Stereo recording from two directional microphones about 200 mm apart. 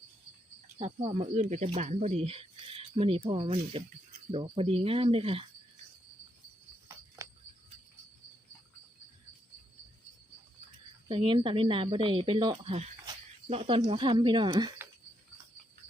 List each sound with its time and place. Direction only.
0.8 s speech: 30° right (ahead or behind)
7.2 s cricket: 15° right (ahead or behind)
11.1 s speech: 25° right (ahead or behind)